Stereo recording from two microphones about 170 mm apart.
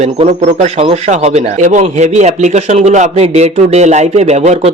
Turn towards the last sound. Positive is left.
turn(degrees=-40)  # may be behind; listen again after turning